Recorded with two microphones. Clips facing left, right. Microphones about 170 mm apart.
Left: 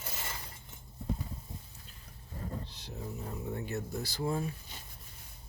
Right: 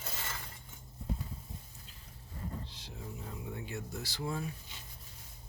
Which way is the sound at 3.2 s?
40° left (ahead or behind).